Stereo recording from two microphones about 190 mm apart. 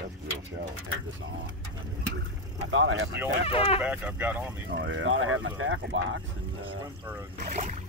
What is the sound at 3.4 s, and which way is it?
Speech, 30° left (ahead or behind).